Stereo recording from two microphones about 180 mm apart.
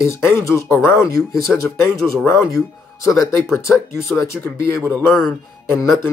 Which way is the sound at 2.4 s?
20° left (ahead or behind).